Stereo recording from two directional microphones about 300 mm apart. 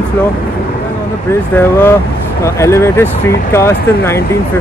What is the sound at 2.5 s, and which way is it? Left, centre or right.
Speech, centre.